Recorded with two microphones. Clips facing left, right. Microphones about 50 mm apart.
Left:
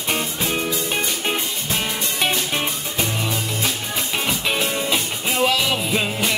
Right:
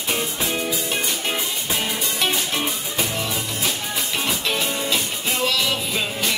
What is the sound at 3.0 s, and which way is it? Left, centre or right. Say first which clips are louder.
Music: left 2 dB; centre.